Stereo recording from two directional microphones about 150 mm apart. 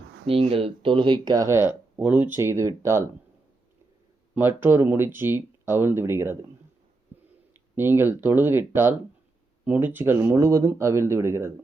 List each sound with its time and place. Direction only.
0.3 s speech: 40° right (ahead or behind); by 3.0 s 20° right (ahead or behind)
4.4 s speech: 15° right (ahead or behind)
7.8 s speech: 15° right (ahead or behind)